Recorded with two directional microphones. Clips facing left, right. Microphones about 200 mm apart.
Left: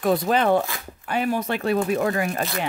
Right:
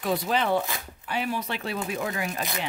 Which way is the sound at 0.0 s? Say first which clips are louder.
Left 6 dB; 50° left (ahead or behind).